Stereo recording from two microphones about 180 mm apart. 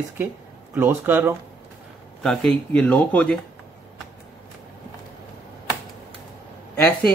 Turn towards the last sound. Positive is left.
turn(degrees=10)  # may be behind; listen again after turning